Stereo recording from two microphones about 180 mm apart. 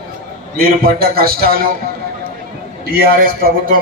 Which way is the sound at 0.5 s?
55° right (ahead or behind).